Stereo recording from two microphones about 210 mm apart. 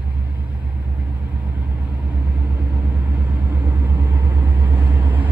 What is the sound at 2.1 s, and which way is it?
Vehicle, 5° right (ahead or behind).